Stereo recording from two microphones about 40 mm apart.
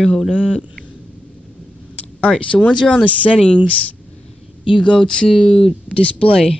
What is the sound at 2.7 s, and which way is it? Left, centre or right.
Speech, left.